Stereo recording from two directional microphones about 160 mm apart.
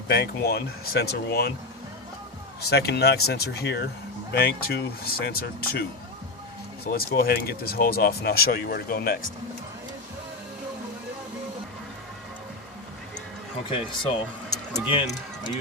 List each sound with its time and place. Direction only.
0.1 s speech: 80° left
2.6 s speech: 90° left
4.3 s speech: 75° left (ahead or behind)
6.8 s speech: 80° left
13.7 s speech: 35° left (ahead or behind)